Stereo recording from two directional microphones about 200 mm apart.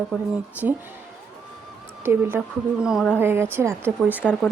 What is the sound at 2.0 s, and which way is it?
A woman's voice, 10° right (ahead or behind).